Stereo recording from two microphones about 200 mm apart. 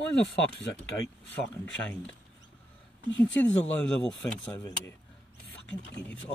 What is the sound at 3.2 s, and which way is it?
Speech, 5° left (ahead or behind).